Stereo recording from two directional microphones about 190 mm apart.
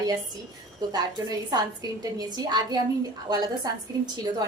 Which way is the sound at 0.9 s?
20° right (ahead or behind).